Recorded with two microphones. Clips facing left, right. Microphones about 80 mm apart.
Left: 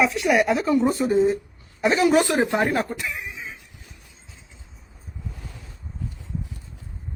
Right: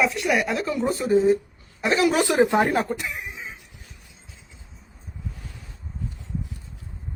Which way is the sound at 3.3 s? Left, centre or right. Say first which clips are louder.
Left 1 dB; right.